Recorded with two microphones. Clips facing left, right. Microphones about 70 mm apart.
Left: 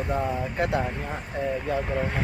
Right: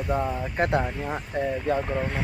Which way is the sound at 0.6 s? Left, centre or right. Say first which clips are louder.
Right 2 dB; right.